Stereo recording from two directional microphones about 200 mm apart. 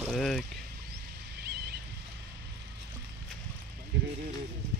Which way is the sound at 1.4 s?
55° right (ahead or behind).